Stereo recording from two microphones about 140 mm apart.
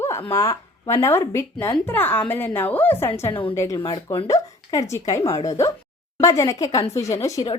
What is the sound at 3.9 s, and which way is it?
Speech, 35° left (ahead or behind).